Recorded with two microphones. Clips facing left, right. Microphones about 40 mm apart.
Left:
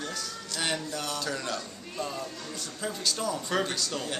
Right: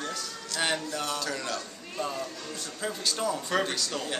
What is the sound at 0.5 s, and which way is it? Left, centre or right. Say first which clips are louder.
Speech: right 2 dB; centre.